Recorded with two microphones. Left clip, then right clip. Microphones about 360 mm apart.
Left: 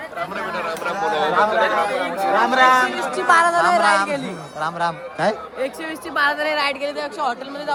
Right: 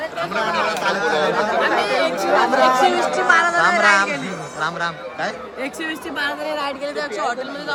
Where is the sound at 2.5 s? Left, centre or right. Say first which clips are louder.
Left 3 dB; left.